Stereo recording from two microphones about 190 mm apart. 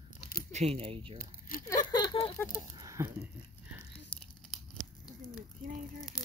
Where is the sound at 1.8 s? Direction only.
25° left (ahead or behind).